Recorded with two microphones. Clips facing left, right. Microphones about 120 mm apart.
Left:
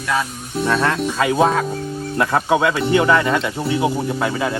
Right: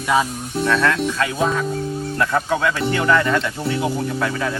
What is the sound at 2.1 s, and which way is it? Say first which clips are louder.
Speech: left 4 dB; 20° left (ahead or behind).